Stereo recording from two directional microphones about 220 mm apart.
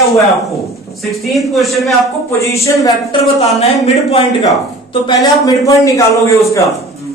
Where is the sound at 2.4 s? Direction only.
15° left (ahead or behind).